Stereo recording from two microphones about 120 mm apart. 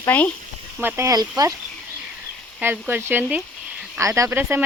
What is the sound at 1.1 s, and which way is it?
Speech, 30° right (ahead or behind).